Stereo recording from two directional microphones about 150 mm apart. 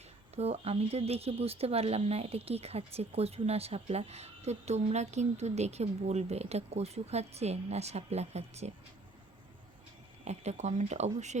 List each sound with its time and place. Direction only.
0.3 s speech: 45° right (ahead or behind)
10.2 s speech: 50° right (ahead or behind)